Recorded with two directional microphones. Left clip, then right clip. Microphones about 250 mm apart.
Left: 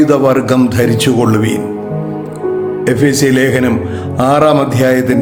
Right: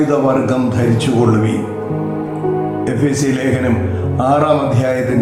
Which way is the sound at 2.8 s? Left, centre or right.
Left.